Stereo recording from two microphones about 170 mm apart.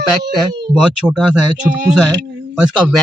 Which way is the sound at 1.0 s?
5° right (ahead or behind).